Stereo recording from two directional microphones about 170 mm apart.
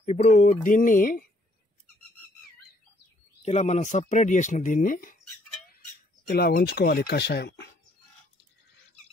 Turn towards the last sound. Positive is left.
turn(degrees=75)  # may be behind; listen again after turning